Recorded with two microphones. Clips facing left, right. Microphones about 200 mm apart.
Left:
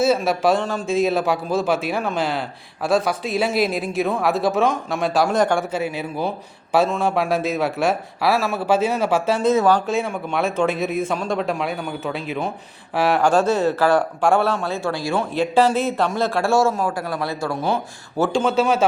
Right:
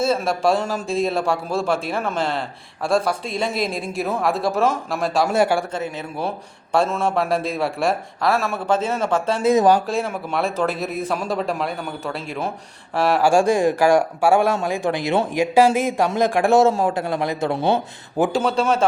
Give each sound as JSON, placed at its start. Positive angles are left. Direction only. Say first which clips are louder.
{"t": 0.0, "sound": "a man's voice", "louder": "left 2 dB", "side_deg": 5}
{"t": 5.7, "sound": "a man's voice", "louder": "left 3 dB", "side_deg": 10}
{"t": 9.4, "sound": "speech", "louder": "right 3 dB", "side_deg": -15}
{"t": 9.8, "sound": "a man's voice", "louder": "left 1 dB", "side_deg": 0}
{"t": 13.3, "sound": "speech", "louder": "right 1 dB", "side_deg": -15}
{"t": 15.5, "sound": "a man's voice", "louder": "right 2 dB", "side_deg": -10}
{"t": 18.4, "sound": "a man's voice", "louder": "left 1 dB", "side_deg": 0}